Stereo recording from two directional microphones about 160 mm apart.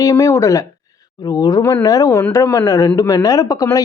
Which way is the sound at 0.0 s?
20° left (ahead or behind).